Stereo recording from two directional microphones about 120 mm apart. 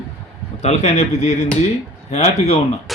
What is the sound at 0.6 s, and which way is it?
A man's voice, 70° left (ahead or behind).